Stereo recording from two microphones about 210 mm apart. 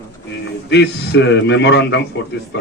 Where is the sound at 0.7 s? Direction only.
55° left (ahead or behind).